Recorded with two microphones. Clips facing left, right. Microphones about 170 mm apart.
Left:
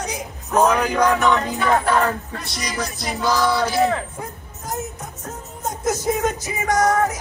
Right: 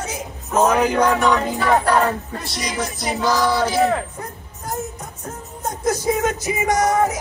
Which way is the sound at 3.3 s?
10° right (ahead or behind).